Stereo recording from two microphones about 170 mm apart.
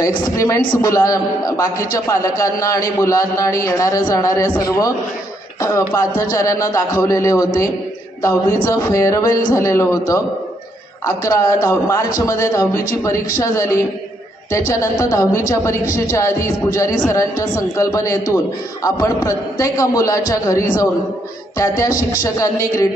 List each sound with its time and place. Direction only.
0.0 s a man's voice: 20° left (ahead or behind)